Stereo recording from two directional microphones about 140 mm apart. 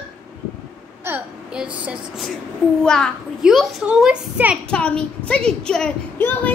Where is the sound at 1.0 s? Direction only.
10° right (ahead or behind).